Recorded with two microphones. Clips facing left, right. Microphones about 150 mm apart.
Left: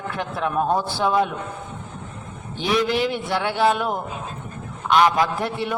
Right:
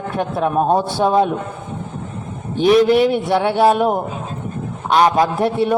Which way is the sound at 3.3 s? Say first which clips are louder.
Right 6 dB; 25° right (ahead or behind).